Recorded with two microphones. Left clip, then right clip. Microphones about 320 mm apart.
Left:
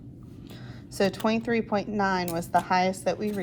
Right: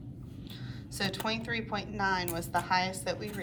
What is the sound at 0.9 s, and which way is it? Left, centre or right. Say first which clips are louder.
A woman's voice: left 8 dB; centre.